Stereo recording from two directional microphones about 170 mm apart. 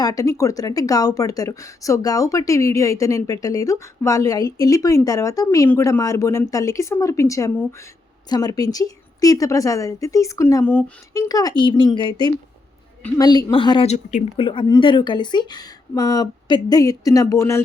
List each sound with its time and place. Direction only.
0.0 s speech: 20° left (ahead or behind)
11.2 s speech: 20° left (ahead or behind); by 14.3 s 45° left (ahead or behind)
14.3 s speech: 30° left (ahead or behind)